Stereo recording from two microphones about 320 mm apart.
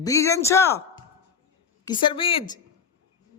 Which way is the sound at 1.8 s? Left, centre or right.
Centre.